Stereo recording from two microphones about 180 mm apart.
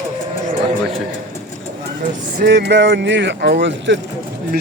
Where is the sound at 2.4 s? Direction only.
65° right (ahead or behind).